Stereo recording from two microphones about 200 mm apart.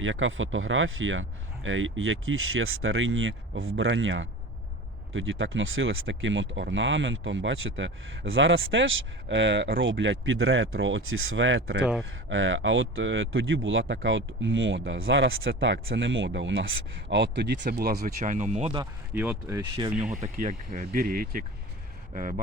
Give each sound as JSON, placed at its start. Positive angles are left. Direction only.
{"t": 0.0, "sound": "speech", "side_deg": -75}
{"t": 18.2, "sound": "speech", "side_deg": -40}
{"t": 19.1, "sound": "speech", "side_deg": -5}
{"t": 19.7, "sound": "speech", "side_deg": -25}
{"t": 20.2, "sound": "speech", "side_deg": -40}